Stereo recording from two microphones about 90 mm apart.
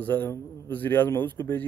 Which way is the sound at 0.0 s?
20° left (ahead or behind).